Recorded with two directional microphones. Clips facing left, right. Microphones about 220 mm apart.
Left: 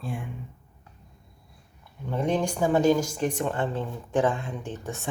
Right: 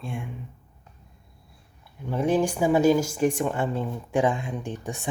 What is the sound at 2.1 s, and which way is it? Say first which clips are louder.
Speech: right 3 dB; 5° right (ahead or behind).